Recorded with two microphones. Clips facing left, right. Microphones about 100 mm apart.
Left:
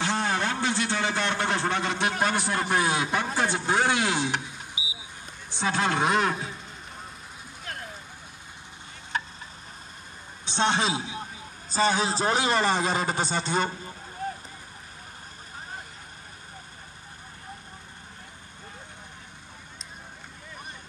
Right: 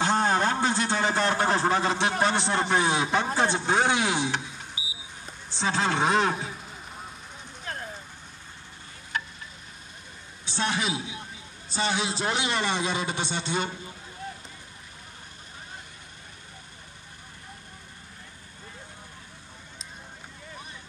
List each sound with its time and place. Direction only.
0.0 s a man's voice: 35° right (ahead or behind); by 4.4 s 20° right (ahead or behind)
4.8 s a sound: 20° left (ahead or behind)
5.6 s speech: 25° right (ahead or behind)
6.3 s vehicle: centre (ahead or behind)
10.4 s a man's voice: 25° left (ahead or behind); by 13.9 s 40° left (ahead or behind)
14.2 s vehicle: 45° left (ahead or behind)